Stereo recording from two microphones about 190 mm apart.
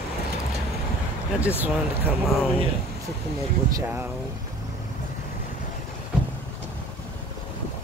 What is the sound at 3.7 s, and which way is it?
Mechanisms, 10° right (ahead or behind).